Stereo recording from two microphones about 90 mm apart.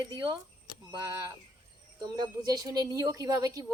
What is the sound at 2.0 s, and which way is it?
A woman's voice, 50° right (ahead or behind).